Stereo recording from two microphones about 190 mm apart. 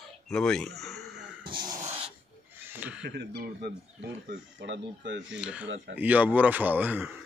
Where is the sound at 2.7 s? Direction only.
10° right (ahead or behind).